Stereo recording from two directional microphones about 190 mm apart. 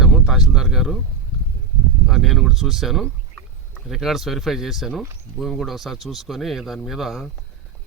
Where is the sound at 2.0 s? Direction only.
Centre (ahead or behind).